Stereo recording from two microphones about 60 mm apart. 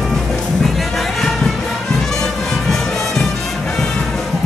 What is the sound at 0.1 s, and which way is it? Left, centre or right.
Music, centre.